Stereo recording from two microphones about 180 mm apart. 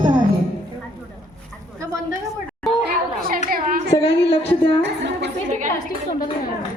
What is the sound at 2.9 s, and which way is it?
Children playing, 55° right (ahead or behind).